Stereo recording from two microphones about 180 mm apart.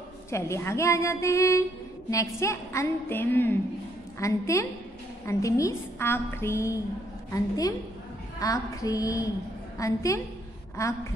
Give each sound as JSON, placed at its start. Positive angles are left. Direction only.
{"t": 0.3, "sound": "a woman's voice", "side_deg": 15}